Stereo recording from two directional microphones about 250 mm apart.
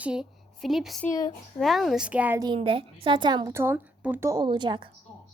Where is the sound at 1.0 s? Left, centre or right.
Centre.